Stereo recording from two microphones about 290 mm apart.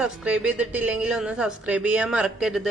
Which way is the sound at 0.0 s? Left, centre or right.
Centre.